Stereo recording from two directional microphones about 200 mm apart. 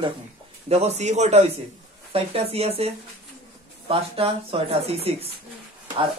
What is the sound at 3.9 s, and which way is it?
Speech, 30° right (ahead or behind).